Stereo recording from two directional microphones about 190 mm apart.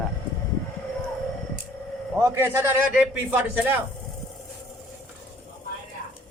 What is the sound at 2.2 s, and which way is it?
A man's voice, 15° right (ahead or behind).